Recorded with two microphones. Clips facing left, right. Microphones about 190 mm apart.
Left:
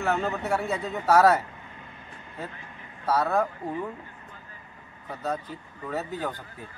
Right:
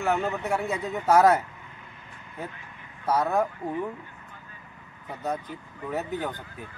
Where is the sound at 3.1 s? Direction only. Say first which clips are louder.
Even; 15° right (ahead or behind).